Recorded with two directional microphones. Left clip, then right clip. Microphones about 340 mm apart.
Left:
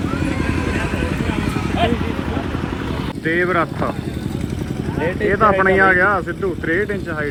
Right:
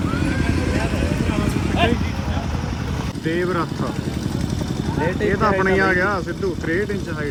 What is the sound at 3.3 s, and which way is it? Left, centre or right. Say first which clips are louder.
Speech: left 5 dB; centre.